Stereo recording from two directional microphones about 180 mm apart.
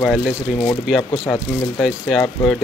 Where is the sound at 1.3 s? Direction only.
5° left (ahead or behind).